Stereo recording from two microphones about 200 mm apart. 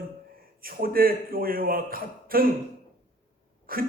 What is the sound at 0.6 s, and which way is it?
A man's voice, 45° right (ahead or behind).